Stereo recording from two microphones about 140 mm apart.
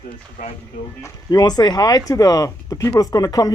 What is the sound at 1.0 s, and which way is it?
Chuckle, 30° left (ahead or behind).